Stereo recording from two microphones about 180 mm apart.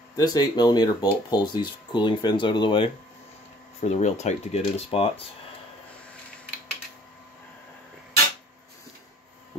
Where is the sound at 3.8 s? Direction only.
35° left (ahead or behind).